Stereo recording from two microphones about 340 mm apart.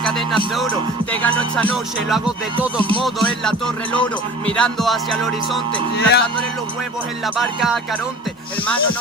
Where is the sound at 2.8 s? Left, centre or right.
Centre.